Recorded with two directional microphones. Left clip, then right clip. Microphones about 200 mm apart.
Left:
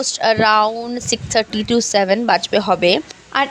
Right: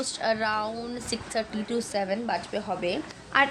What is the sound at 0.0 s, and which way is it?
Speech, 40° left (ahead or behind).